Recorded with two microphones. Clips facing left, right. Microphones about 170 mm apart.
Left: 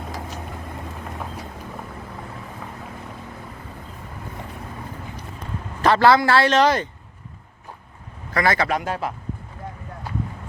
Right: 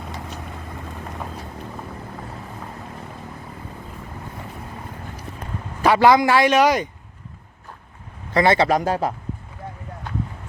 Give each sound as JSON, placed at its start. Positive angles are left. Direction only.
{"t": 5.8, "sound": "a man's voice", "side_deg": -15}
{"t": 8.3, "sound": "a man's voice", "side_deg": -25}